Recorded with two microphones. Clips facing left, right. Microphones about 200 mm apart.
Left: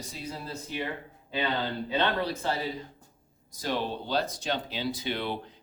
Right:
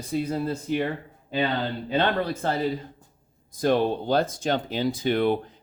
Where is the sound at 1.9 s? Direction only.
50° right (ahead or behind).